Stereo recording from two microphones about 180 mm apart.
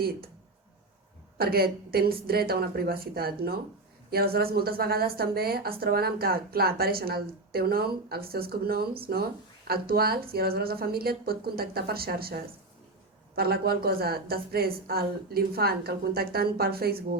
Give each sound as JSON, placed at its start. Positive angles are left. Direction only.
{"t": 1.4, "sound": "a woman's voice", "side_deg": -60}